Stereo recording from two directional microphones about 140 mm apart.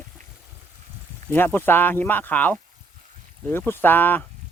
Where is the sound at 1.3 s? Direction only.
15° left (ahead or behind).